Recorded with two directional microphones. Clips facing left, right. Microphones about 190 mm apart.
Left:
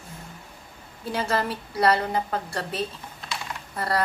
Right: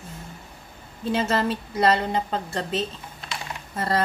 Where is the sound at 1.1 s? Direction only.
25° right (ahead or behind).